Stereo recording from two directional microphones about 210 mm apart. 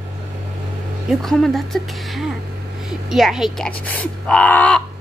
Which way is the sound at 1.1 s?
Centre (ahead or behind).